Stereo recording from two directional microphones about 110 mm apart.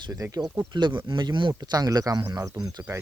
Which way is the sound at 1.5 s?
35° right (ahead or behind).